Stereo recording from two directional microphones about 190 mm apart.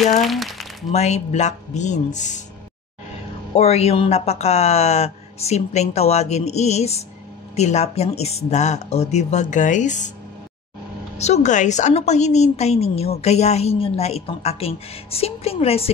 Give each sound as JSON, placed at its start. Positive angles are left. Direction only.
{"t": 0.2, "sound": "speech", "side_deg": 0}
{"t": 0.9, "sound": "a woman's voice", "side_deg": 35}
{"t": 3.5, "sound": "a woman's voice", "side_deg": 35}
{"t": 11.1, "sound": "a woman's voice", "side_deg": 35}